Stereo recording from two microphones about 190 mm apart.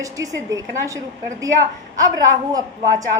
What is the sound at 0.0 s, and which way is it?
A woman's voice, 15° right (ahead or behind).